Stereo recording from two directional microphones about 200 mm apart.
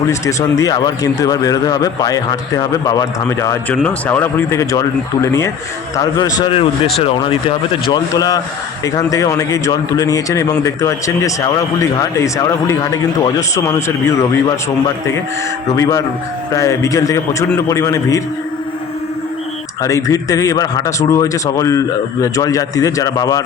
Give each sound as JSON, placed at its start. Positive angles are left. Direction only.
{"t": 0.1, "sound": "speech", "side_deg": 15}
{"t": 15.7, "sound": "speech", "side_deg": 15}
{"t": 19.8, "sound": "speech", "side_deg": 15}